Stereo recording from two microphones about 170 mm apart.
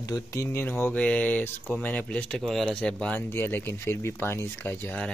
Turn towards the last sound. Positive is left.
turn(degrees=10)  # may be behind; listen again after turning